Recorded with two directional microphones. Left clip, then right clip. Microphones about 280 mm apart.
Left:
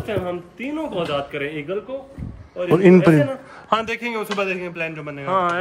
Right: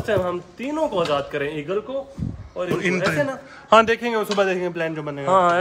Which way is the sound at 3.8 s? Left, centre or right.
Centre.